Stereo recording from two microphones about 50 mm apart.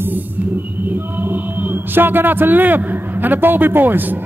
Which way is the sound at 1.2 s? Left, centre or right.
Right.